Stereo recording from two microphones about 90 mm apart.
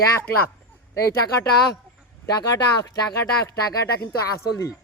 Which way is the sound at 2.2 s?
45° left (ahead or behind).